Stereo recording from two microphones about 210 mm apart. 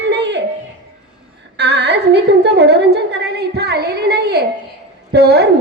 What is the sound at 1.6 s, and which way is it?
A woman's voice, 55° right (ahead or behind).